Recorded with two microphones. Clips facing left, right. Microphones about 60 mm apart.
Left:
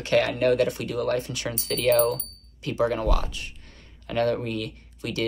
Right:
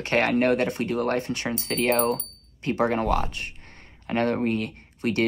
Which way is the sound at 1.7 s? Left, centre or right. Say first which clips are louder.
Left 3 dB; right.